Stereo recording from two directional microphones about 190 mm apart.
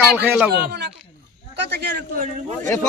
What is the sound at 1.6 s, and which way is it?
Speech, 65° right (ahead or behind).